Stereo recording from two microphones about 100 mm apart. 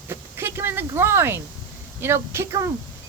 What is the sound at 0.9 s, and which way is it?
Speech, 25° right (ahead or behind).